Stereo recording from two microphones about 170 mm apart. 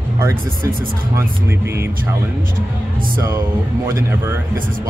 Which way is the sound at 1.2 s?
15° right (ahead or behind).